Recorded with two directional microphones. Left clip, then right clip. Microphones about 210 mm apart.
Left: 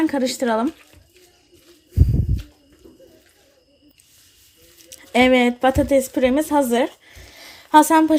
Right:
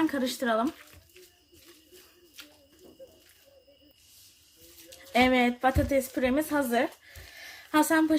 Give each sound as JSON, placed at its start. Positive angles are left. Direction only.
{"t": 0.1, "sound": "speech", "side_deg": 35}
{"t": 4.9, "sound": "speech", "side_deg": 40}
{"t": 7.3, "sound": "a sound", "side_deg": 35}